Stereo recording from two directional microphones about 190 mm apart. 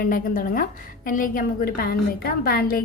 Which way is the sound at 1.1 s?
45° left (ahead or behind).